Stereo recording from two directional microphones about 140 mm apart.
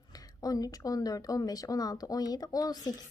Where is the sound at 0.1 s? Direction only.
25° left (ahead or behind).